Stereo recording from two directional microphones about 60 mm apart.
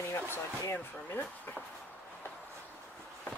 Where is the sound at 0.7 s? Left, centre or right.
Left.